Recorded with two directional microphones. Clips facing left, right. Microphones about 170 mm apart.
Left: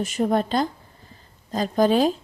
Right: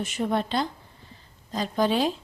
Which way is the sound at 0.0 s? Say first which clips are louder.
Left 5 dB; 40° left (ahead or behind).